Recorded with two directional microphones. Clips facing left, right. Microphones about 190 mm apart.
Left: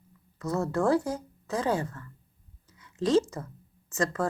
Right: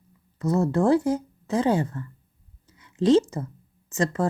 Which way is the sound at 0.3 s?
25° right (ahead or behind).